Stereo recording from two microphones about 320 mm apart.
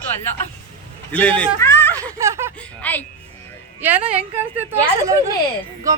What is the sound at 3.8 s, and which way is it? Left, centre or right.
A woman's voice, centre.